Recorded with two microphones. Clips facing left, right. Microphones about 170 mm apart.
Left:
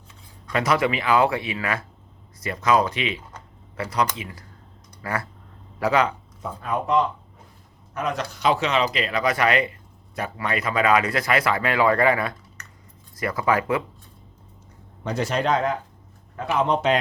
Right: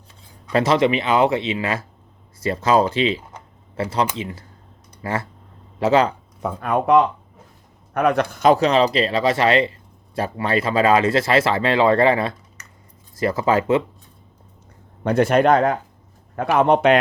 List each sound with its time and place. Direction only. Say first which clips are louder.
0.5 s speech: right 5 dB; 25° right (ahead or behind)
6.4 s a man's voice: right 6 dB; 65° right (ahead or behind); by 13.8 s 25° right (ahead or behind)
15.0 s a man's voice: right 8 dB; 55° right (ahead or behind)